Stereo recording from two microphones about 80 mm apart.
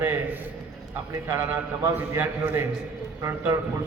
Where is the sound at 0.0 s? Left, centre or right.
Right.